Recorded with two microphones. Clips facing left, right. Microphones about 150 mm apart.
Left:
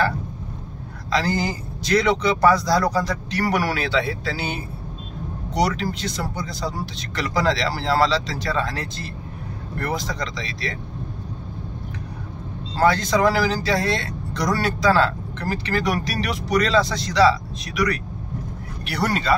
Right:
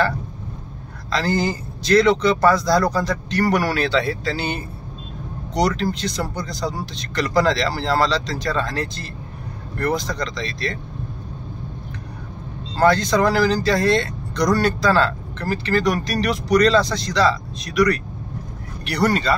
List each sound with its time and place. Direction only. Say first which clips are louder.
1.1 s speech: right 2 dB; 10° left (ahead or behind)
12.7 s speech: right 2 dB; 5° left (ahead or behind)